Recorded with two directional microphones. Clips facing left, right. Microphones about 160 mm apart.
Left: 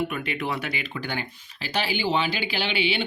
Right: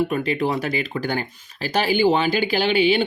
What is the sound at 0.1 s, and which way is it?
Speech, 35° right (ahead or behind).